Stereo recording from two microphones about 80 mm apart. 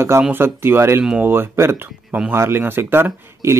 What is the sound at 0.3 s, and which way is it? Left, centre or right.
Speech, right.